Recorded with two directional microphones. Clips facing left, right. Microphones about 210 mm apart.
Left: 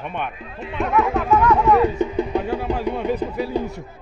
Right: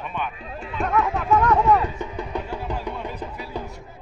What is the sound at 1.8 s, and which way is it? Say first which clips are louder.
Speech: left 10 dB; 25° left (ahead or behind).